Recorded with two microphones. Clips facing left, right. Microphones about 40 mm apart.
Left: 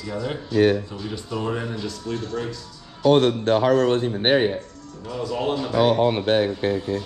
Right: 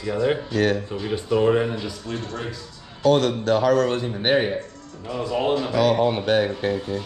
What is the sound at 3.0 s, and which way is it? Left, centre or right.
A man's voice, left.